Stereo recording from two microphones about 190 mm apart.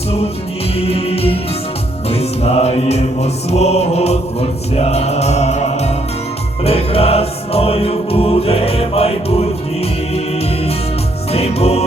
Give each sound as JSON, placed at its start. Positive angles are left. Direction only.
{"t": 0.8, "sound": "music", "side_deg": 30}
{"t": 11.3, "sound": "music", "side_deg": 35}